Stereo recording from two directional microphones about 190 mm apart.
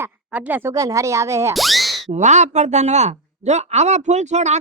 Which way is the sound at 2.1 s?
40° right (ahead or behind).